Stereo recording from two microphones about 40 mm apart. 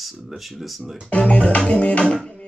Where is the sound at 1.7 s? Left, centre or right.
Left.